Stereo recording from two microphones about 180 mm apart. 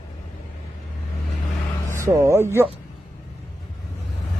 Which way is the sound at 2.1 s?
15° right (ahead or behind).